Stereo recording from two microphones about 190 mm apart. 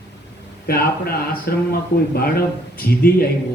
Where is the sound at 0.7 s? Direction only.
55° left (ahead or behind).